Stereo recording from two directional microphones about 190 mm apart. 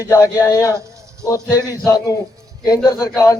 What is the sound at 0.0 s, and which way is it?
A man's voice, 15° left (ahead or behind).